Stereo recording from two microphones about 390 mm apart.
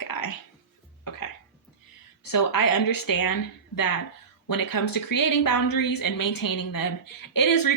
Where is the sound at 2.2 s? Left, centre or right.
Left.